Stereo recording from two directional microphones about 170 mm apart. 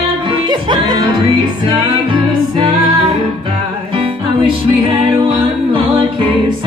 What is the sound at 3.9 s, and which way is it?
Music, 30° right (ahead or behind).